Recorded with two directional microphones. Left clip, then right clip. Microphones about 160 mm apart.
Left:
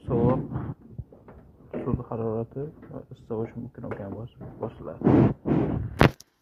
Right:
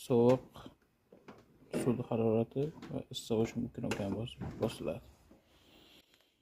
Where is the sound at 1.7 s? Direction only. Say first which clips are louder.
Left 3 dB; 35° right (ahead or behind).